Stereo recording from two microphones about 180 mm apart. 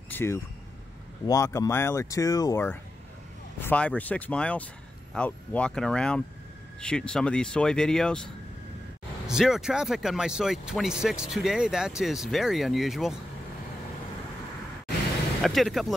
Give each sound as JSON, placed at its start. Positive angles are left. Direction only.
{"t": 0.1, "sound": "vehicle", "side_deg": 15}
{"t": 1.2, "sound": "speech", "side_deg": 15}
{"t": 9.3, "sound": "speech", "side_deg": -5}
{"t": 15.4, "sound": "speech", "side_deg": 0}